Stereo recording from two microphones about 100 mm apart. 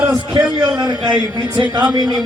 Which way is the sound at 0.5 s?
45° right (ahead or behind).